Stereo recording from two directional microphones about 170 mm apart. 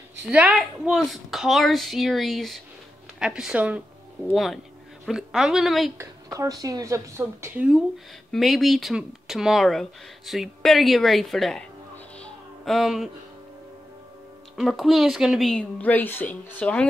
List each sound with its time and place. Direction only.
0.3 s speech: 5° right (ahead or behind)
5.9 s speech: 20° right (ahead or behind); by 11.6 s centre (ahead or behind)
12.2 s a sound: centre (ahead or behind)
14.6 s speech: centre (ahead or behind)